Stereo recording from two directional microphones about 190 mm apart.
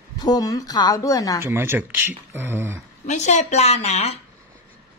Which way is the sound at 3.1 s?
40° left (ahead or behind).